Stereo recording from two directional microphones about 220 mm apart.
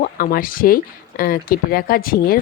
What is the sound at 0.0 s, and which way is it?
Speech, 40° left (ahead or behind).